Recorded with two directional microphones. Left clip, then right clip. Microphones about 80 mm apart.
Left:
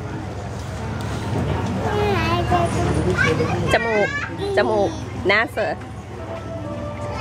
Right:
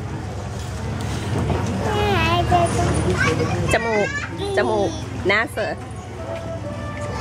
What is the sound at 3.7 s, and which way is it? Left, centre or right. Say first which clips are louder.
Speech: left 1 dB; centre.